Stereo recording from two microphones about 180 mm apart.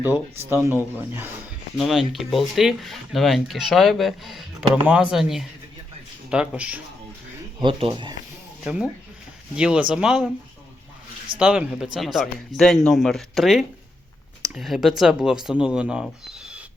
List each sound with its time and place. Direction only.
0.5 s speech: 10° right (ahead or behind)
1.8 s speech: centre (ahead or behind)
7.6 s speech: 30° right (ahead or behind)
8.6 s speech: 5° right (ahead or behind)
11.3 s speech: 5° right (ahead or behind)